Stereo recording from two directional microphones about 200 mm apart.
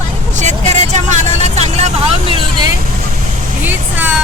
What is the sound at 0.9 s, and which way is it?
Vehicle, 35° right (ahead or behind).